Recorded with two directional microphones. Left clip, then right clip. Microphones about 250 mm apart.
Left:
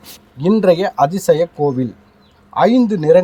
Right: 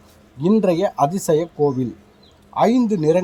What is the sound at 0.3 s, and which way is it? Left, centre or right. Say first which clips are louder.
Speech: left 5 dB; centre.